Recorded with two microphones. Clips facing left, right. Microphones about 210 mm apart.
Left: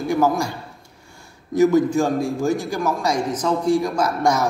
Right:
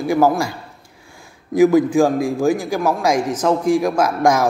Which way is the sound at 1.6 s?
90° right.